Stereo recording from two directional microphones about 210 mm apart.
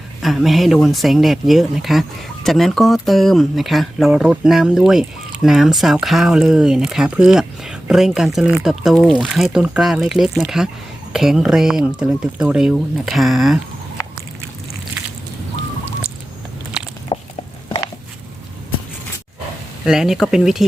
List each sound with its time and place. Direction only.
0.2 s speech: centre (ahead or behind)
17.1 s a sound: 25° left (ahead or behind)
19.8 s speech: centre (ahead or behind)